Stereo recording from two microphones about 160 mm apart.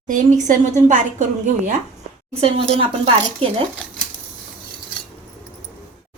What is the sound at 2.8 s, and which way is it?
Speech, 35° right (ahead or behind).